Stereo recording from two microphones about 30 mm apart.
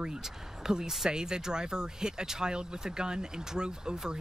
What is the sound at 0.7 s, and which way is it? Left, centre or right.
Speech, right.